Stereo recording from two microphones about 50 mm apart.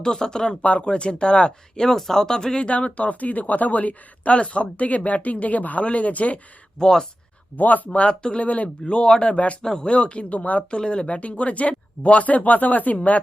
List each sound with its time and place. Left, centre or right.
0.0 s speech: centre
0.6 s speech: left
2.6 s speech: left
6.7 s speech: centre
7.5 s speech: left
7.9 s speech: left
8.9 s speech: centre
10.7 s speech: centre